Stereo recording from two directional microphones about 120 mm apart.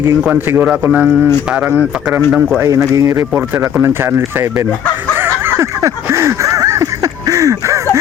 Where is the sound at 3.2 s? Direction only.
15° right (ahead or behind).